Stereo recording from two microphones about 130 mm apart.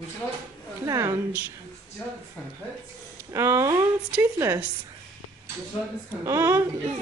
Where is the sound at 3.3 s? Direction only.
20° right (ahead or behind).